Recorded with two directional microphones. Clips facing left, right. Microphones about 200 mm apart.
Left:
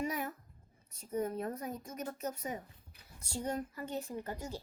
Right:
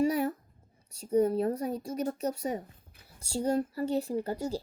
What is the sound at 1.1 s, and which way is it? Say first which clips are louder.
A woman's voice: right 10 dB; 35° right (ahead or behind).